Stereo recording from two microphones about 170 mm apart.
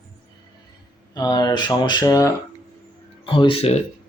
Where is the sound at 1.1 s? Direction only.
25° left (ahead or behind).